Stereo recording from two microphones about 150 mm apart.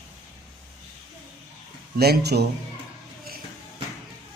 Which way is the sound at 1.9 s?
90° right.